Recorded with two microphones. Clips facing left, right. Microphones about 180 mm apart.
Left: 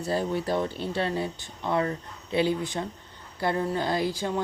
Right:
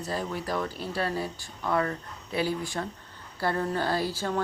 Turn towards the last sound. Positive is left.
turn(degrees=15)  # may be behind; listen again after turning